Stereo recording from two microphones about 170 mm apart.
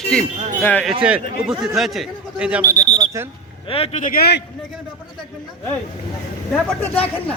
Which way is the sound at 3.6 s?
35° left (ahead or behind).